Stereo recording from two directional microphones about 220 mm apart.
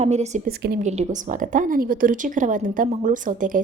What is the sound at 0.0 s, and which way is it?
A woman's voice, 30° right (ahead or behind).